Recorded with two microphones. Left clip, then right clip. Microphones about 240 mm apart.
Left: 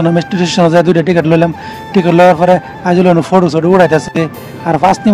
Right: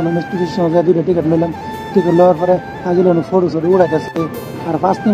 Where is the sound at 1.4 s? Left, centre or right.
Left.